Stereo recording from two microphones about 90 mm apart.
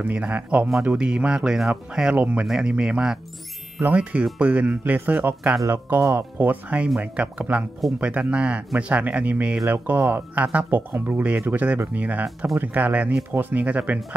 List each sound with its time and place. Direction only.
0.0 s speech: 15° right (ahead or behind)
5.9 s speech: 30° right (ahead or behind)